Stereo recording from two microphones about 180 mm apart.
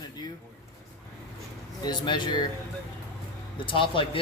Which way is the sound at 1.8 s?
25° left (ahead or behind).